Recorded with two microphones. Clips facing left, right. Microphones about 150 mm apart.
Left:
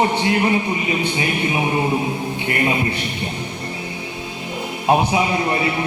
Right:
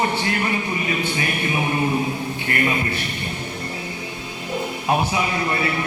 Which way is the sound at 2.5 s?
20° left (ahead or behind).